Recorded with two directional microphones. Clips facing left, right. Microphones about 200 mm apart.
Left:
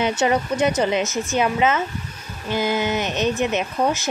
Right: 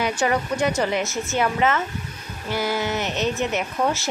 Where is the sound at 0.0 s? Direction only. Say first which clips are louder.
Left 2 dB; 20° left (ahead or behind).